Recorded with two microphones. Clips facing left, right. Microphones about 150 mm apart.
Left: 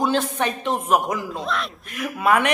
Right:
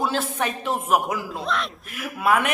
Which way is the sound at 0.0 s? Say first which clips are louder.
Left 3 dB; 5° right (ahead or behind).